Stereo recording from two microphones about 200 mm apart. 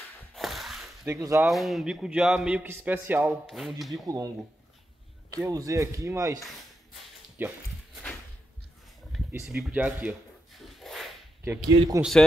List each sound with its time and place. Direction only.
0.3 s a sound: centre (ahead or behind)
1.0 s speech: 15° right (ahead or behind)
1.4 s a man's voice: centre (ahead or behind)
4.0 s speech: 20° right (ahead or behind)
5.4 s speech: 15° right (ahead or behind)
7.3 s dog: 10° right (ahead or behind)
9.6 s a sound: 5° right (ahead or behind)
11.4 s speech: 10° right (ahead or behind)